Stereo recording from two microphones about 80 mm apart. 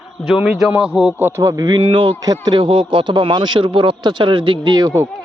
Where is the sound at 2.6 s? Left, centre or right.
Right.